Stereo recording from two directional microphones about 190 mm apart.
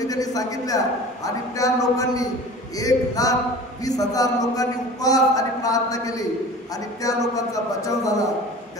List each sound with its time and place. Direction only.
0.0 s a man's voice: 20° left (ahead or behind)